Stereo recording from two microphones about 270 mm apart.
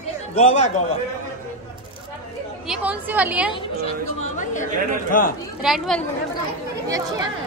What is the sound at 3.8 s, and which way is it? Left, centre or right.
Speech, left.